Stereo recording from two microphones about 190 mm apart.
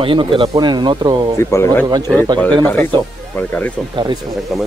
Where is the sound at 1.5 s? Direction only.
15° left (ahead or behind).